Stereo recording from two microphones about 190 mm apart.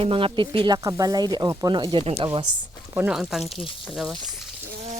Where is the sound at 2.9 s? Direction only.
5° right (ahead or behind).